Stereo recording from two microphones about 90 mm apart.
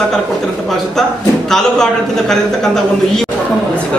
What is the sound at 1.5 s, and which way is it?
A man's voice, 5° left (ahead or behind).